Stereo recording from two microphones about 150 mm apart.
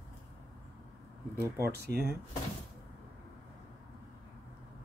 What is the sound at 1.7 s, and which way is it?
Speech, 90° right.